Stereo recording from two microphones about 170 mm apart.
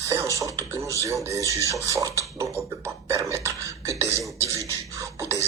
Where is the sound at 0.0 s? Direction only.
20° right (ahead or behind).